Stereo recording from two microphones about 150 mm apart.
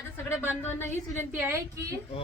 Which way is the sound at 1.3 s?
15° right (ahead or behind).